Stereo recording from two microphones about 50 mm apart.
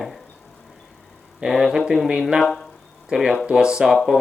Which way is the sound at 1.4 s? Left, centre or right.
Centre.